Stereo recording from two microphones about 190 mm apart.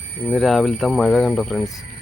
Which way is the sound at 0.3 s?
Centre (ahead or behind).